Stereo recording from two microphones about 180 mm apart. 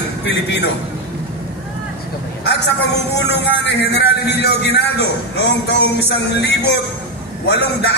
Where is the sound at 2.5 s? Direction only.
70° left (ahead or behind).